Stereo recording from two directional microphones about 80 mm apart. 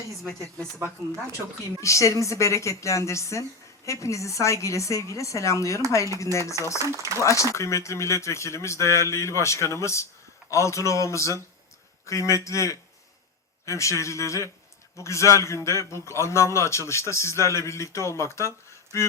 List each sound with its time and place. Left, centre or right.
1.8 s a man's voice: left
6.8 s speech: right
7.2 s a man's voice: left